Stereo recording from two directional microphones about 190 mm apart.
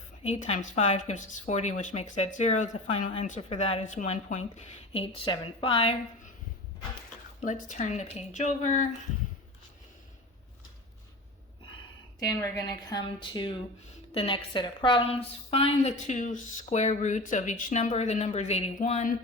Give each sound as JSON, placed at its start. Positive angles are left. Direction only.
{"t": 0.2, "sound": "speech", "side_deg": 35}
{"t": 7.4, "sound": "speech", "side_deg": 40}
{"t": 12.2, "sound": "speech", "side_deg": 20}